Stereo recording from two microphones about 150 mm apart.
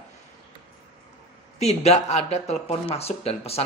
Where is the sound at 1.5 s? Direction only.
45° left (ahead or behind).